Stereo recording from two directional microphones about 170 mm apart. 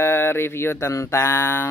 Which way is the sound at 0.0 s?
15° left (ahead or behind).